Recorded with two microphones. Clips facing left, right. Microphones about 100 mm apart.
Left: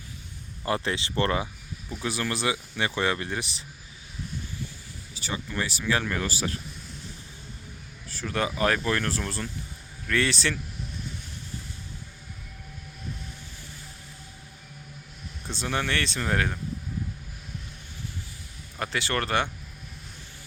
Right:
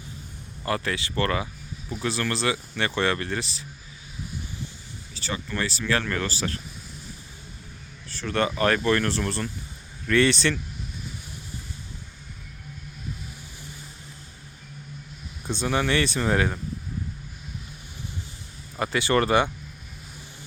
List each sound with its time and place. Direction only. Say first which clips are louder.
0.6 s speech: even; 20° left (ahead or behind)
2.0 s speech: right 2 dB; 15° left (ahead or behind)
5.1 s speech: right 1 dB; 15° left (ahead or behind)
8.1 s speech: right 3 dB; 5° left (ahead or behind)
15.4 s speech: right 5 dB; 5° right (ahead or behind)
18.8 s speech: right 6 dB; 5° right (ahead or behind)